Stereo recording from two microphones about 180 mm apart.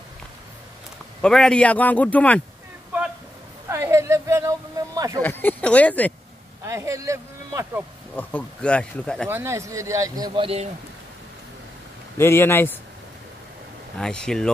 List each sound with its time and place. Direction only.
1.2 s speech: 5° left (ahead or behind)
3.6 s a sound: 15° right (ahead or behind)
5.2 s speech: 10° left (ahead or behind)
6.6 s speech: 15° right (ahead or behind)
8.2 s speech: 10° left (ahead or behind)
9.3 s speech: 15° right (ahead or behind); by 10.7 s 30° right (ahead or behind)
12.2 s speech: 15° left (ahead or behind)
13.9 s speech: 5° left (ahead or behind)